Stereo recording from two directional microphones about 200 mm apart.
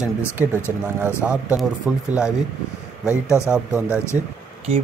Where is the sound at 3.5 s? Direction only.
5° right (ahead or behind).